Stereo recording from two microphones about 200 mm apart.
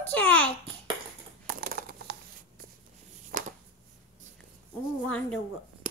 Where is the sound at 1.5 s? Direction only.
45° right (ahead or behind).